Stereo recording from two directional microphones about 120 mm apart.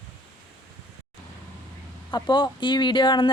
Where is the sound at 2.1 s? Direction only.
35° left (ahead or behind).